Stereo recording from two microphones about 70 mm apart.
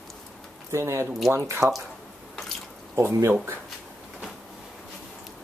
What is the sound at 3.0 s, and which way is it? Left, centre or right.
Speech, right.